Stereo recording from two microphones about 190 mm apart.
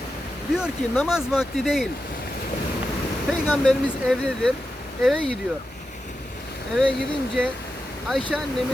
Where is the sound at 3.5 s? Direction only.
5° left (ahead or behind).